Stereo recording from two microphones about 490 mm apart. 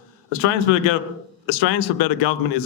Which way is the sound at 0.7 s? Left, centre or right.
Left.